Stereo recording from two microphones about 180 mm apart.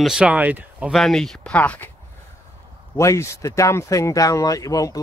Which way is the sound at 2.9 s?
15° left (ahead or behind).